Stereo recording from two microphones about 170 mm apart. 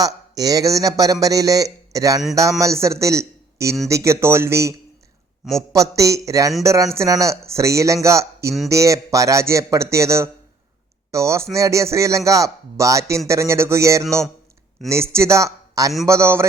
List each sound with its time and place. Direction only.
0.0 s a man's voice: 20° right (ahead or behind)
5.7 s a man's voice: 20° right (ahead or behind)